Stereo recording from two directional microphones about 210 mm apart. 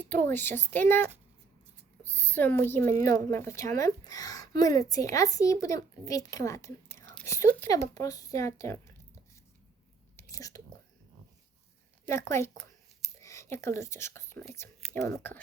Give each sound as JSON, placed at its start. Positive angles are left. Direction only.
{"t": 0.0, "sound": "speech", "side_deg": 10}
{"t": 2.0, "sound": "a woman's voice", "side_deg": 10}
{"t": 10.2, "sound": "whispering", "side_deg": 15}
{"t": 12.0, "sound": "speech", "side_deg": 10}